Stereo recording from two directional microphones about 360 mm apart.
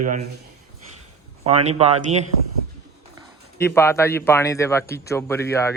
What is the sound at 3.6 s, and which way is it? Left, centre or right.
A man's voice, centre.